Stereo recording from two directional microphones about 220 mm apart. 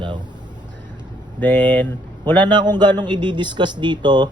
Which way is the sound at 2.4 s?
20° right (ahead or behind).